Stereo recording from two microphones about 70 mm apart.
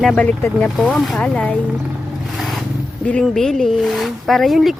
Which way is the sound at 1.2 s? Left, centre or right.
Centre.